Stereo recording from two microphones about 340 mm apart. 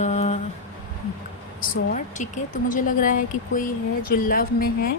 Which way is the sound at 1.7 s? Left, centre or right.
Left.